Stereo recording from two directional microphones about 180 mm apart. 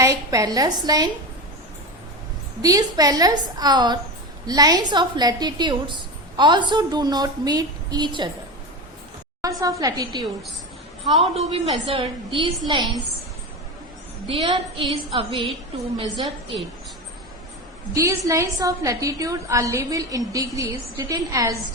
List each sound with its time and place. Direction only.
0.0 s a woman's voice: 20° right (ahead or behind)
2.6 s a woman's voice: 20° right (ahead or behind)
9.4 s a woman's voice: 20° right (ahead or behind)
14.3 s a woman's voice: 30° right (ahead or behind)
17.9 s a woman's voice: 15° right (ahead or behind)